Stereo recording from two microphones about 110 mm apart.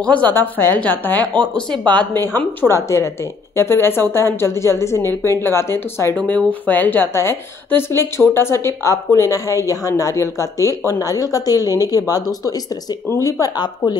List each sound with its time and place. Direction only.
0.0 s speech: 15° left (ahead or behind)
1.2 s speech: 40° right (ahead or behind)
1.7 s speech: 15° left (ahead or behind); by 13.9 s 35° left (ahead or behind)